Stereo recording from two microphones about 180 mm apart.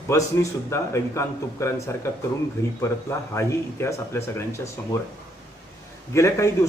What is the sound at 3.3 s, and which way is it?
Speech, 15° left (ahead or behind).